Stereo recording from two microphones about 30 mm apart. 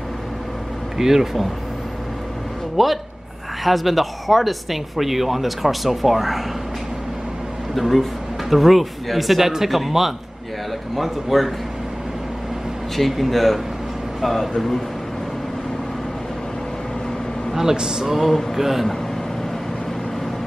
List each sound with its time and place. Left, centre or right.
0.9 s speech: centre
2.8 s speech: centre
7.7 s speech: centre
12.9 s speech: centre
17.7 s speech: right
18.0 s speech: centre